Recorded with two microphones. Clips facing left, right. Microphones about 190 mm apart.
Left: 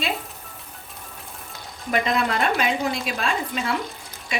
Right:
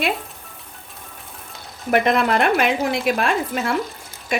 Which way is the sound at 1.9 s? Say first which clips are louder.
Right 5 dB; 60° right (ahead or behind).